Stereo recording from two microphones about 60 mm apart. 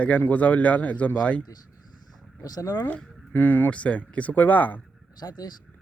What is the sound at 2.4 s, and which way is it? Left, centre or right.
Speech, left.